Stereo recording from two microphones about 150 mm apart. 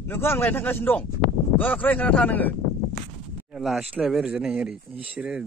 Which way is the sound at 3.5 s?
Centre (ahead or behind).